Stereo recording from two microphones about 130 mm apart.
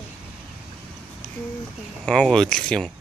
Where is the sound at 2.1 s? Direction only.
5° left (ahead or behind).